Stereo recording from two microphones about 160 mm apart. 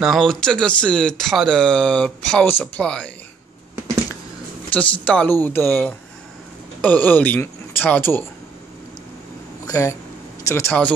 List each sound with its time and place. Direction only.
0.0 s speech: centre (ahead or behind)
4.7 s speech: 10° left (ahead or behind)
9.7 s speech: 20° left (ahead or behind)